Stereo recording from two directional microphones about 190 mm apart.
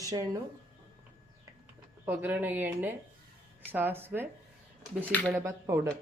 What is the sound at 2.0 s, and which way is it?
Speech, 10° right (ahead or behind).